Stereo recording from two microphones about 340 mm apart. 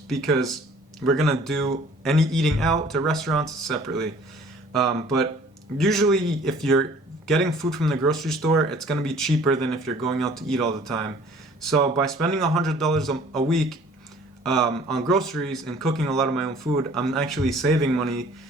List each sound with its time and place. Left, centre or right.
0.1 s speech: centre